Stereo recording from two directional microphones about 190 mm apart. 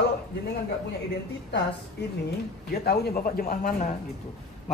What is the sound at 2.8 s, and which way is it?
Speech, 55° left (ahead or behind).